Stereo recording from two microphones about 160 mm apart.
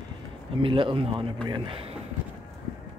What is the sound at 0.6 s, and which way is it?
A man's voice, 30° right (ahead or behind).